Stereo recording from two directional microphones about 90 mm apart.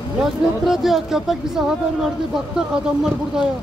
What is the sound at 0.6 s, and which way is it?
Speech, 5° right (ahead or behind).